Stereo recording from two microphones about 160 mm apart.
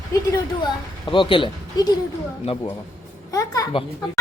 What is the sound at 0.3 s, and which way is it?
Speech, 25° left (ahead or behind).